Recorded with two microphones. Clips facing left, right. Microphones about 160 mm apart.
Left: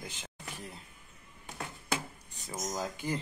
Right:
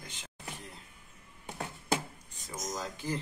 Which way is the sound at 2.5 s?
15° left (ahead or behind).